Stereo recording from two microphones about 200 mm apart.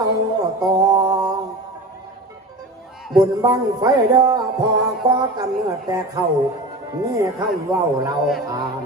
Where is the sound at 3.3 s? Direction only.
20° right (ahead or behind).